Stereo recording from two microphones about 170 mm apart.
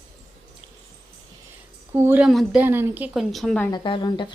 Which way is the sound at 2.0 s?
10° right (ahead or behind).